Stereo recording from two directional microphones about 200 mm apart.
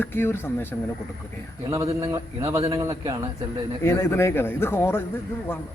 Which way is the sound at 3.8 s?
10° left (ahead or behind).